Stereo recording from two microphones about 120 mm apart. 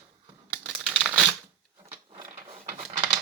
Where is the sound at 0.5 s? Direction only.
10° right (ahead or behind).